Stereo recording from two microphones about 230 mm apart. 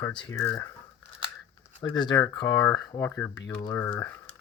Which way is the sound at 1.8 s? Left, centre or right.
Centre.